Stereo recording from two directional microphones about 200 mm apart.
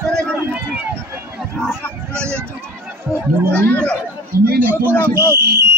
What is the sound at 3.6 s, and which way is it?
Speech, 5° left (ahead or behind).